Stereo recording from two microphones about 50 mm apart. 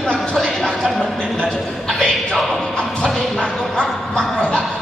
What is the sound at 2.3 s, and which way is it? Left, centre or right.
Music, centre.